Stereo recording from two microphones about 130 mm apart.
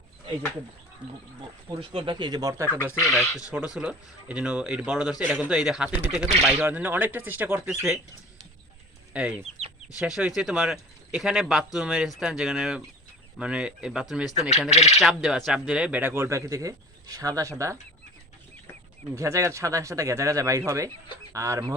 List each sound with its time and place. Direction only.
1.4 s speech: 35° right (ahead or behind)
2.6 s speech: 15° left (ahead or behind)
3.0 s speech: centre (ahead or behind)
9.1 s speech: 10° right (ahead or behind)
9.6 s chicken: 50° right (ahead or behind)
10.0 s speech: 5° right (ahead or behind)
14.7 s bird: 60° left (ahead or behind)
15.0 s speech: 5° right (ahead or behind); by 17.5 s 25° right (ahead or behind)
19.1 s speech: 25° right (ahead or behind)